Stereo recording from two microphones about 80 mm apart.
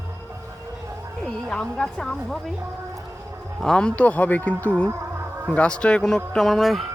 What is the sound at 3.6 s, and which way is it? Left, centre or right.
Speech, centre.